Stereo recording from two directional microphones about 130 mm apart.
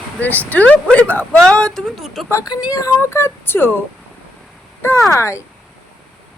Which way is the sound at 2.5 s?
30° left (ahead or behind).